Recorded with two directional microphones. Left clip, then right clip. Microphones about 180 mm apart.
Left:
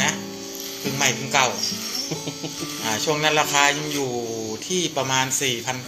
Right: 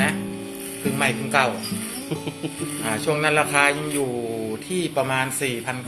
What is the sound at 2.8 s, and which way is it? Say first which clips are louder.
Speech: left 1 dB; 15° right (ahead or behind).